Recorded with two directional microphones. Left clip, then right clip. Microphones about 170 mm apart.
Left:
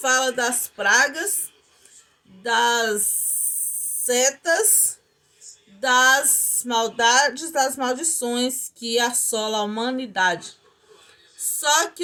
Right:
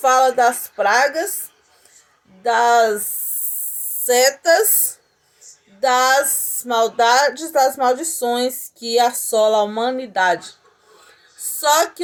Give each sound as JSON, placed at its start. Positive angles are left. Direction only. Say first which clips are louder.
{"t": 0.2, "sound": "speech", "louder": "right 8 dB", "side_deg": 20}
{"t": 2.4, "sound": "speech", "louder": "right 6 dB", "side_deg": 20}
{"t": 4.0, "sound": "speech", "louder": "right 6 dB", "side_deg": 10}
{"t": 11.4, "sound": "a sound", "louder": "right 4 dB", "side_deg": 20}